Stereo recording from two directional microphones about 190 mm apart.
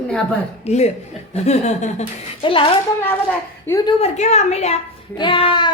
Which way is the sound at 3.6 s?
15° left (ahead or behind).